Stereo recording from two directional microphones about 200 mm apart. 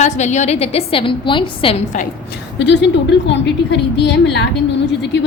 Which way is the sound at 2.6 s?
60° left (ahead or behind).